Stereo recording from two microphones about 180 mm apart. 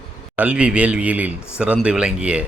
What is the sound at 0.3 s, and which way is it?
A man's voice, 5° right (ahead or behind).